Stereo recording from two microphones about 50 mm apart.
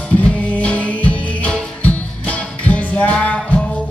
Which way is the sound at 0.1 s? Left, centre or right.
Left.